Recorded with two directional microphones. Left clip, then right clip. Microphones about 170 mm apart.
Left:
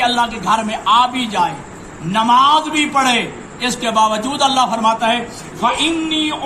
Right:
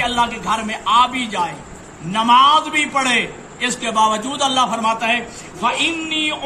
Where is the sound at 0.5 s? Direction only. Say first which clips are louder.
Left 2 dB; 5° right (ahead or behind).